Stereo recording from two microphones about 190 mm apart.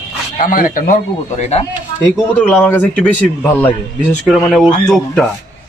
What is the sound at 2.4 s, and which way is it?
A man's voice, 5° left (ahead or behind).